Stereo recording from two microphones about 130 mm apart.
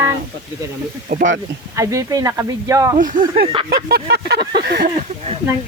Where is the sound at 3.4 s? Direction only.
45° right (ahead or behind).